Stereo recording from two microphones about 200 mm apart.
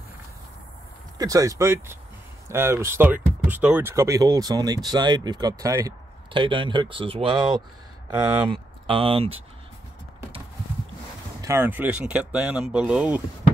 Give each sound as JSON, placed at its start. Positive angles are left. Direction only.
{"t": 1.1, "sound": "speech", "side_deg": -15}
{"t": 11.4, "sound": "speech", "side_deg": -10}